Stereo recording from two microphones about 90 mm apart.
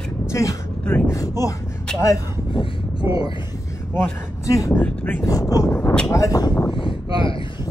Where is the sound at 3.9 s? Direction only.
35° left (ahead or behind).